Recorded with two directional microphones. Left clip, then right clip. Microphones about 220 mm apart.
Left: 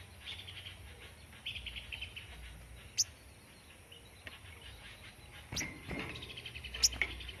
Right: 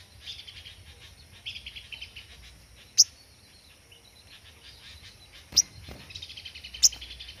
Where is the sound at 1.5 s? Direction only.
50° right (ahead or behind).